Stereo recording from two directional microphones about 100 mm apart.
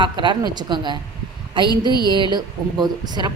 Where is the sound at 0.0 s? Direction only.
50° right (ahead or behind).